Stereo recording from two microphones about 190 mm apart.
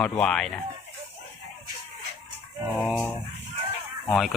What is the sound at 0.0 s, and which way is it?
Speech, 5° left (ahead or behind).